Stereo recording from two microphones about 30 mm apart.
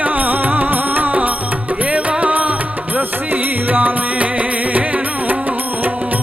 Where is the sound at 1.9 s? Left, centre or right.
Right.